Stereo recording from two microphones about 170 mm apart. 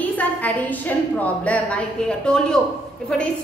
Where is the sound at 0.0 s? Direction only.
10° left (ahead or behind).